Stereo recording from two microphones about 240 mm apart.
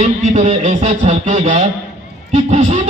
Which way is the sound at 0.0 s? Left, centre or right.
Right.